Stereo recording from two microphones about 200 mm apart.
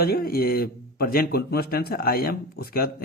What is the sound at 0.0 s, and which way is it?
Speech, 50° left (ahead or behind).